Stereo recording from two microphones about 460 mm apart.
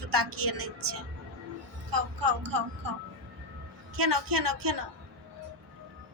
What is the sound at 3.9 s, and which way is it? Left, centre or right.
Speech, right.